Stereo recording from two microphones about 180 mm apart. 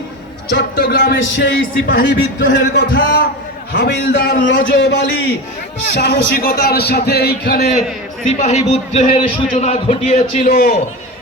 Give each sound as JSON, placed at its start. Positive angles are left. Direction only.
{"t": 0.5, "sound": "a man's voice", "side_deg": 60}
{"t": 2.6, "sound": "a man's voice", "side_deg": 60}
{"t": 8.4, "sound": "a man's voice", "side_deg": 40}
{"t": 10.4, "sound": "a man's voice", "side_deg": 55}